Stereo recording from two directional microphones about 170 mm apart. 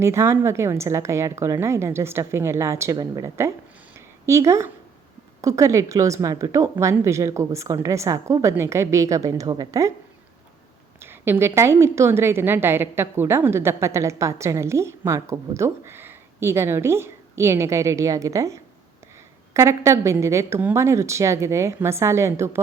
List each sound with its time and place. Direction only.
0.0 s a woman's voice: 15° right (ahead or behind)
3.9 s a sound: 15° right (ahead or behind)
5.4 s a woman's voice: 20° right (ahead or behind)
11.0 s a woman's voice: 15° right (ahead or behind)